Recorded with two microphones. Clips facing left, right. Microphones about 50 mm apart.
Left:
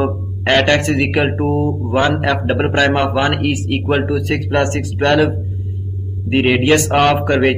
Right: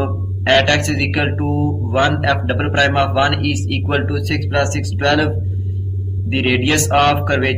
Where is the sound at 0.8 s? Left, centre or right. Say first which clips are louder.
Left 3 dB; centre.